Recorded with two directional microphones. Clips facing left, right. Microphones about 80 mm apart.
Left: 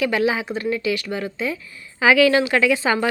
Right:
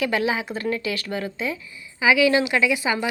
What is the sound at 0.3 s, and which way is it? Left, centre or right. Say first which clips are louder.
Speech: left 2 dB; left.